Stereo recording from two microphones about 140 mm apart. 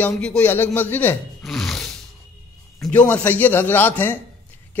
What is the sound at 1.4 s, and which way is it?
Roar, centre (ahead or behind).